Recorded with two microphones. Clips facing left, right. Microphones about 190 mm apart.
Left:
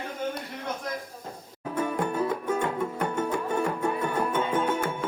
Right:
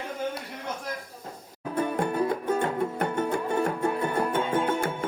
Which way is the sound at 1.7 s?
35° right (ahead or behind).